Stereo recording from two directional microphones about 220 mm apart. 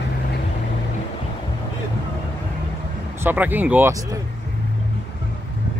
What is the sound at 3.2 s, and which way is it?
Speech, 10° right (ahead or behind).